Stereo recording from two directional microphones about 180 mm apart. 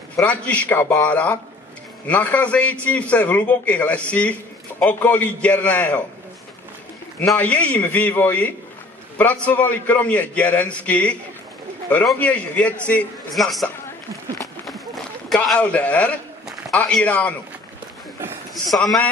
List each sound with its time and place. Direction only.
0.1 s a man's voice: 5° left (ahead or behind)
7.2 s a man's voice: 10° left (ahead or behind)
15.2 s a man's voice: 5° left (ahead or behind)
18.5 s speech: centre (ahead or behind)